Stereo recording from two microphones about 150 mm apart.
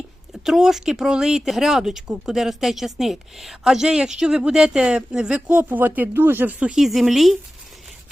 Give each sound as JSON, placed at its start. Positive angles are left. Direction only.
{"t": 0.4, "sound": "speech", "side_deg": -5}